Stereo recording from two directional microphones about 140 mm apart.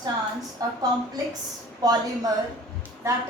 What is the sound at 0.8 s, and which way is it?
A woman's voice, 25° right (ahead or behind).